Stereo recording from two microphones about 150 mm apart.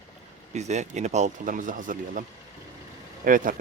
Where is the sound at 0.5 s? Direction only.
50° right (ahead or behind).